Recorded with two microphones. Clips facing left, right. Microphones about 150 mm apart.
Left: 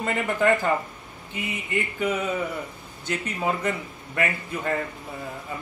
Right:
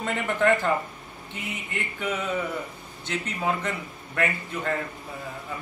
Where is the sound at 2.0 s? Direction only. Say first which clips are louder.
Left 1 dB; 5° left (ahead or behind).